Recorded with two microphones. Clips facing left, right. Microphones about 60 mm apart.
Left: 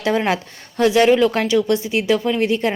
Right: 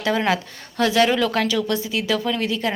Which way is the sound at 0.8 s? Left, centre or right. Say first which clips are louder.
Left 5 dB; left.